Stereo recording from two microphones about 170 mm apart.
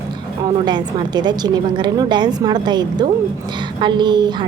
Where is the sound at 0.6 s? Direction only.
25° right (ahead or behind).